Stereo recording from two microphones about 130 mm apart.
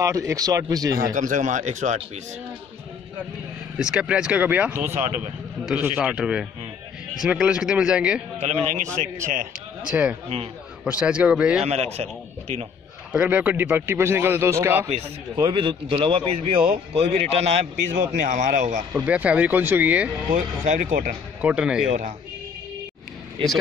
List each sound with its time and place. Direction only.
0.0 s speech: 25° right (ahead or behind)
1.0 s speech: 90° right; by 2.0 s 70° right (ahead or behind)
3.7 s speech: 5° right (ahead or behind)
8.4 s speech: 55° right (ahead or behind)
8.9 s speech: 80° right
9.8 s speech: 10° right (ahead or behind)
11.6 s speech: 55° right (ahead or behind)
13.1 s speech: 10° right (ahead or behind)
15.4 s a man's voice: 40° right (ahead or behind)
18.1 s speech: 70° right (ahead or behind)
19.0 s speech: 10° right (ahead or behind)
20.3 s speech: 75° right (ahead or behind)
21.4 s speech: 10° right (ahead or behind)